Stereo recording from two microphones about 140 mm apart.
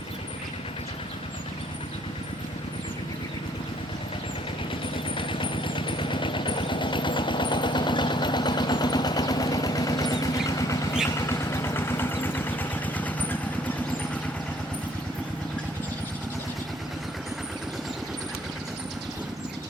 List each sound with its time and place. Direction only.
5.1 s vehicle: 35° left (ahead or behind); by 13.7 s 10° left (ahead or behind)